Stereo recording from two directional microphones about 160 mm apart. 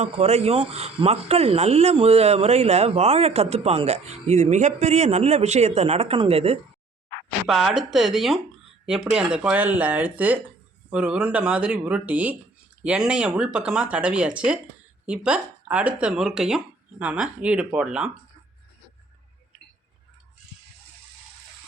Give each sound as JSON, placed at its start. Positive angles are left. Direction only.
{"t": 0.0, "sound": "speech", "side_deg": -40}
{"t": 7.4, "sound": "speech", "side_deg": 0}